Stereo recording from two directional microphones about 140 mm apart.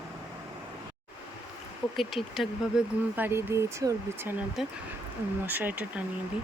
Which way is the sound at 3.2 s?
15° right (ahead or behind).